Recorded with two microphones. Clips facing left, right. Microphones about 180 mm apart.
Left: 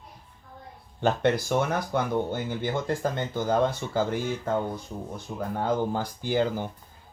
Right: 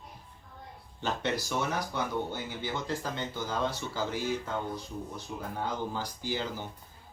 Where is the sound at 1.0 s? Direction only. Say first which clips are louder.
Left 8 dB; 55° left (ahead or behind).